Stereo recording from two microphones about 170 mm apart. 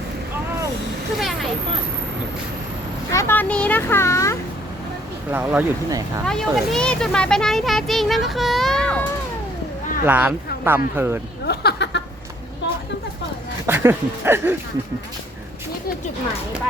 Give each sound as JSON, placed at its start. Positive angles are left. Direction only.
{"t": 1.2, "sound": "vehicle", "side_deg": 0}
{"t": 3.1, "sound": "a child's voice", "side_deg": 15}
{"t": 5.3, "sound": "speech", "side_deg": -10}
{"t": 6.2, "sound": "speech", "side_deg": 0}
{"t": 10.1, "sound": "speech", "side_deg": -10}
{"t": 11.4, "sound": "a sound", "side_deg": 85}
{"t": 13.7, "sound": "speech", "side_deg": -15}